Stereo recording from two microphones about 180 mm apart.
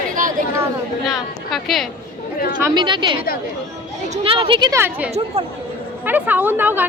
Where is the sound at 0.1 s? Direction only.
45° right (ahead or behind).